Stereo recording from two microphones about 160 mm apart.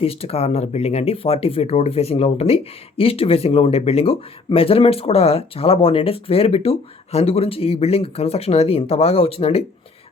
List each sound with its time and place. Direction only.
0.0 s speech: 35° left (ahead or behind)